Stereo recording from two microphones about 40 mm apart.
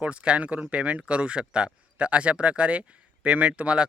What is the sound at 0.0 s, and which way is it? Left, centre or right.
A man's voice, right.